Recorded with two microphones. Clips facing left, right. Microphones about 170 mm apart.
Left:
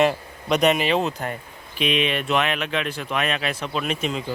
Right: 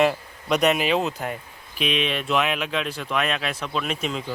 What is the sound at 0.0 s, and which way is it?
Speech, centre (ahead or behind).